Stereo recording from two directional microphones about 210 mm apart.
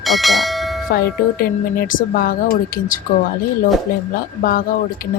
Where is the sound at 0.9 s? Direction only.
45° left (ahead or behind).